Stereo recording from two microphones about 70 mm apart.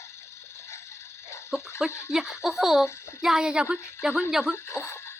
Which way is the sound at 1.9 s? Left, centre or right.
Left.